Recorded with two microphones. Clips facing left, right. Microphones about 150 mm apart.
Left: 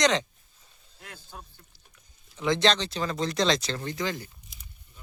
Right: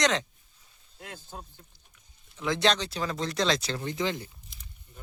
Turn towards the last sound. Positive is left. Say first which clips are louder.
# right 1 dB
turn(degrees=-20)  # may be behind; listen again after turning